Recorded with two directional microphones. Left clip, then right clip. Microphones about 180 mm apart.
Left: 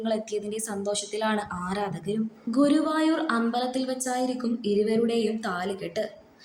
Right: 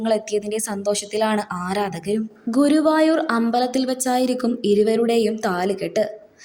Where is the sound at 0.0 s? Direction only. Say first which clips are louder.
Right 8 dB; 35° right (ahead or behind).